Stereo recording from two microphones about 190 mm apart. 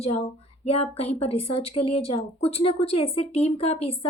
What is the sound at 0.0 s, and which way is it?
A woman's voice, 30° left (ahead or behind).